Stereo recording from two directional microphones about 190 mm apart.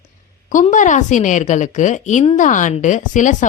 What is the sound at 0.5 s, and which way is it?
A woman's voice, 40° left (ahead or behind).